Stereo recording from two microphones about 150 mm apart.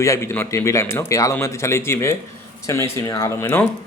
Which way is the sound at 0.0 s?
20° left (ahead or behind).